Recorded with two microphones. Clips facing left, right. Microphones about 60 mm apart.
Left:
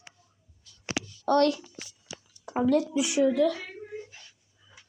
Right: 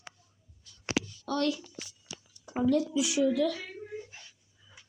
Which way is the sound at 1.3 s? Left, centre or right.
Left.